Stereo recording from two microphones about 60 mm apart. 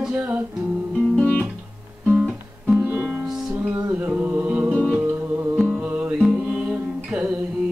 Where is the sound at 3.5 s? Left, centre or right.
Right.